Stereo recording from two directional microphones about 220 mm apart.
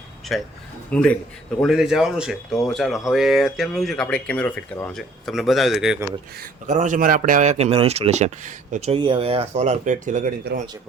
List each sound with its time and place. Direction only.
0.3 s speech: centre (ahead or behind)
6.4 s speech: 35° right (ahead or behind)